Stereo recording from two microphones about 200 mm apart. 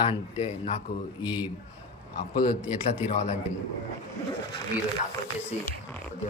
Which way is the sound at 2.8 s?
35° left (ahead or behind).